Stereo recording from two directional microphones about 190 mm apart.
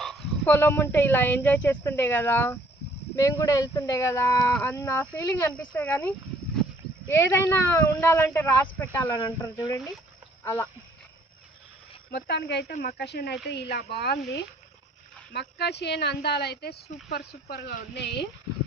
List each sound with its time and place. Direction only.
0.0 s dog: centre (ahead or behind)
0.5 s speech: 10° left (ahead or behind)
12.1 s speech: 65° left (ahead or behind)